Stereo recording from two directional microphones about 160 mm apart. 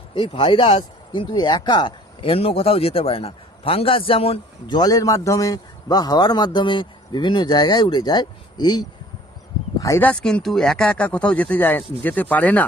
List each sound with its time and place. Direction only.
0.1 s speech: 30° left (ahead or behind)
9.8 s speech: 15° left (ahead or behind)